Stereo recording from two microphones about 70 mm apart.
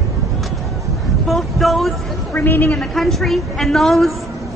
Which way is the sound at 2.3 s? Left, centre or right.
Left.